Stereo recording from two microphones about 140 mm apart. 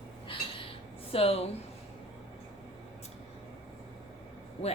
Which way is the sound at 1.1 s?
45° left (ahead or behind).